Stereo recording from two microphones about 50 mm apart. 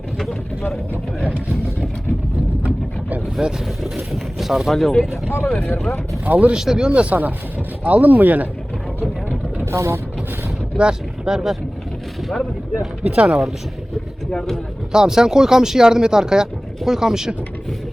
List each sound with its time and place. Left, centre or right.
2.6 s boat: right
3.9 s speech: centre
5.1 s speech: left
6.2 s speech: right
6.5 s speech: centre; by 8.4 s right
9.7 s speech: right
10.8 s speech: centre
12.3 s speech: centre
13.0 s speech: right
13.2 s speech: centre
14.3 s speech: centre
14.9 s speech: centre